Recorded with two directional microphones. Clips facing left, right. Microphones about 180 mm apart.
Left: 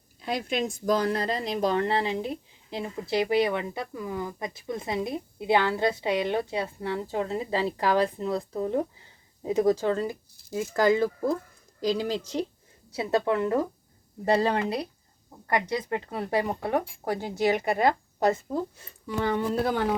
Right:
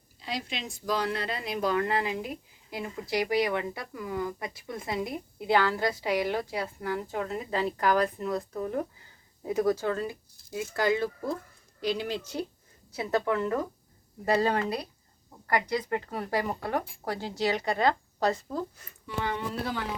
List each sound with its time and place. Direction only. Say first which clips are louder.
0.2 s speech: left 7 dB; 50° left (ahead or behind); by 10.1 s 25° left (ahead or behind)
10.1 s a woman's voice: left 4 dB; 45° left (ahead or behind)
13.0 s speech: left 3 dB; 25° left (ahead or behind)
18.9 s speech: left 5 dB; 40° left (ahead or behind)